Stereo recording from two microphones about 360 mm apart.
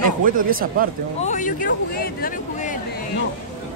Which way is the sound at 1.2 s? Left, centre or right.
Left.